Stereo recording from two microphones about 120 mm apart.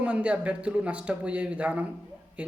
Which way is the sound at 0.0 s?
10° right (ahead or behind).